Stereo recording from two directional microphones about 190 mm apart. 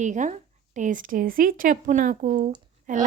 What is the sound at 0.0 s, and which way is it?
A woman's voice, 40° right (ahead or behind).